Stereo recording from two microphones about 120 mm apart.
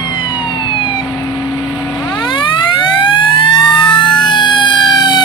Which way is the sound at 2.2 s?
45° left (ahead or behind).